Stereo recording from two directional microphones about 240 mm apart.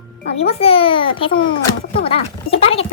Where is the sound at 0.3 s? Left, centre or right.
Left.